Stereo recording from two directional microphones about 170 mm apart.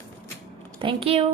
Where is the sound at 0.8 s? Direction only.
30° right (ahead or behind).